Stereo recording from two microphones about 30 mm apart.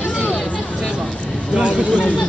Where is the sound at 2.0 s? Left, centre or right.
Left.